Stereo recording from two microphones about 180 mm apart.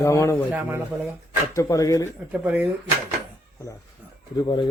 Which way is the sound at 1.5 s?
15° left (ahead or behind).